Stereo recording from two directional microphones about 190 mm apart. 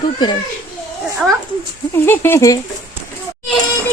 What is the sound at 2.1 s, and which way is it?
Speech, 10° left (ahead or behind).